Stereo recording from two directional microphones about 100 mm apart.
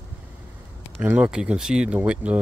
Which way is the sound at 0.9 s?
15° right (ahead or behind).